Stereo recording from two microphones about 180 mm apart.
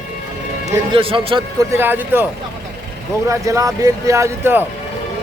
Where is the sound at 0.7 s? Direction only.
30° right (ahead or behind).